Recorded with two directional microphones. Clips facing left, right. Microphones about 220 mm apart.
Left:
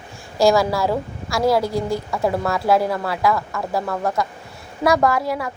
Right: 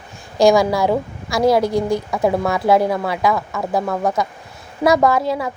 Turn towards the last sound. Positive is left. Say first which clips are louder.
# right 3 dB
turn(degrees=-25)  # may be behind; listen again after turning